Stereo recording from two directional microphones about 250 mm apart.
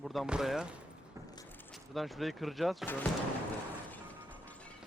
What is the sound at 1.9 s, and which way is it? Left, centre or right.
Speech, centre.